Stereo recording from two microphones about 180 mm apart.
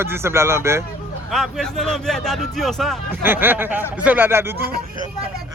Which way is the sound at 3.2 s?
10° right (ahead or behind).